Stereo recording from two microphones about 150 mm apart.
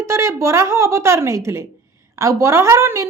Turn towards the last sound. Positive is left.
turn(degrees=-20)  # may be behind; listen again after turning